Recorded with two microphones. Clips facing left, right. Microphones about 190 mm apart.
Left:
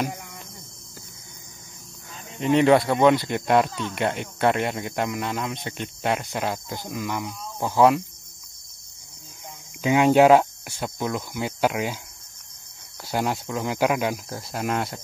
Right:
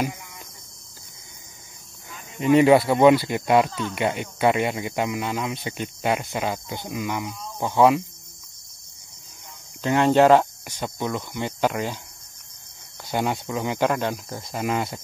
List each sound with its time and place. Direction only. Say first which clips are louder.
0.1 s cricket: left 4 dB; 50° left (ahead or behind)
2.4 s speech: right 2 dB; 5° right (ahead or behind)
9.8 s speech: left 1 dB; 10° left (ahead or behind)
13.1 s speech: right 1 dB; centre (ahead or behind)